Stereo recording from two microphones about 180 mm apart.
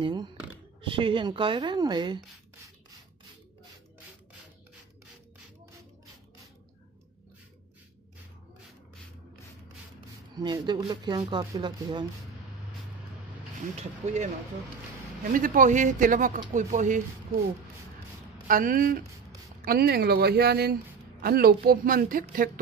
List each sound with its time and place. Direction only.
0.0 s speech: 25° right (ahead or behind)
10.3 s speech: 25° right (ahead or behind)
13.7 s speech: 40° right (ahead or behind)
15.3 s speech: 50° right (ahead or behind)
18.5 s speech: 50° right (ahead or behind)